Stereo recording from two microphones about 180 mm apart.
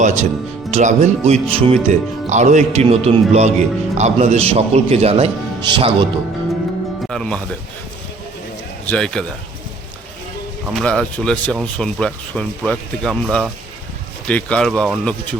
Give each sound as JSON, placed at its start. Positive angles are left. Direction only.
{"t": 0.0, "sound": "speech", "side_deg": -45}
{"t": 7.1, "sound": "speech", "side_deg": 5}
{"t": 8.9, "sound": "speech", "side_deg": 5}
{"t": 10.7, "sound": "speech", "side_deg": 5}